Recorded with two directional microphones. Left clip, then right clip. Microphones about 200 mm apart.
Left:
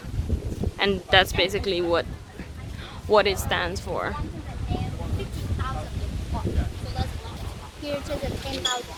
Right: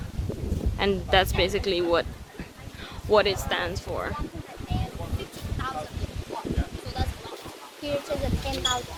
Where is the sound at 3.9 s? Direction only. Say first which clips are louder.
Left 4 dB; 35° left (ahead or behind).